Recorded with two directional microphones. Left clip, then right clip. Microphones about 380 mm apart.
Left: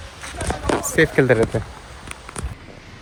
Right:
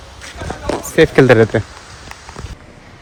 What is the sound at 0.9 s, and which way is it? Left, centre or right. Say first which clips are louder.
Speech: right 7 dB; centre.